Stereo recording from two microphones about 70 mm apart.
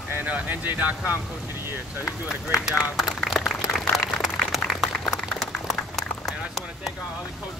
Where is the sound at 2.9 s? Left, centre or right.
Centre.